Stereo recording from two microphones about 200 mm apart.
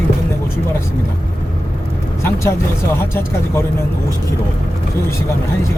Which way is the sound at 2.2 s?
15° left (ahead or behind).